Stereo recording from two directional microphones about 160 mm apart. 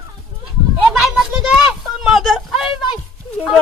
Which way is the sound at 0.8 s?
5° right (ahead or behind).